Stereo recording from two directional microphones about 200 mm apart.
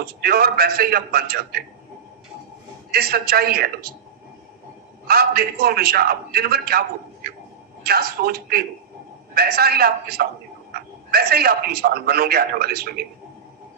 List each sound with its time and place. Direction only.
0.0 s a man's voice: 50° right (ahead or behind)
2.9 s a man's voice: 50° right (ahead or behind)
5.0 s a man's voice: 50° right (ahead or behind)
7.9 s a man's voice: 50° right (ahead or behind)